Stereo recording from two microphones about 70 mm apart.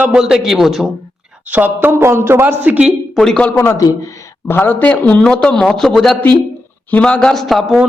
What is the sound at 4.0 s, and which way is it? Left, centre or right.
Speech, left.